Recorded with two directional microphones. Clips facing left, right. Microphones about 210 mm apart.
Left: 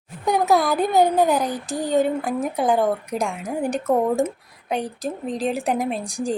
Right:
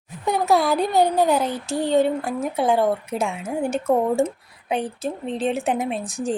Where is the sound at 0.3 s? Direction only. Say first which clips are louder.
Even; centre (ahead or behind).